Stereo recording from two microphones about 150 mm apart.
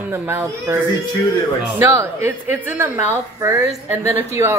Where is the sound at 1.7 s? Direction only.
20° right (ahead or behind).